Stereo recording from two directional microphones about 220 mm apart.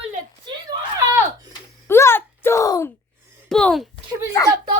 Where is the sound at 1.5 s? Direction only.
10° left (ahead or behind).